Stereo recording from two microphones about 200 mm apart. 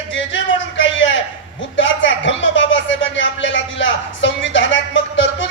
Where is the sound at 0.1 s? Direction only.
65° left (ahead or behind).